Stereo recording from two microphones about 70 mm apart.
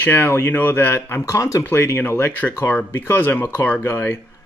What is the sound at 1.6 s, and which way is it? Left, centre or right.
Speech, left.